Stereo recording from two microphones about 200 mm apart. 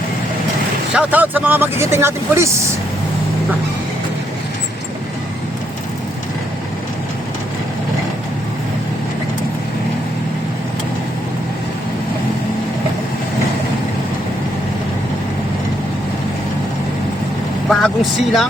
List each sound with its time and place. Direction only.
0.9 s speech: 10° right (ahead or behind)
17.7 s speech: centre (ahead or behind)